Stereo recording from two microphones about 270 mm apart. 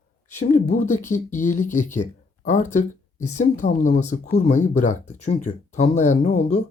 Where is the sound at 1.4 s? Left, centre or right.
Left.